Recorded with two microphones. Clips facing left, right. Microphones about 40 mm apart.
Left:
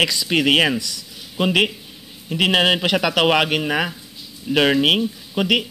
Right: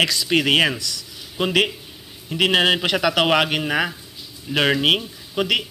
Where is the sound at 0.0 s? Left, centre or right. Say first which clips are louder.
Left 1 dB; centre.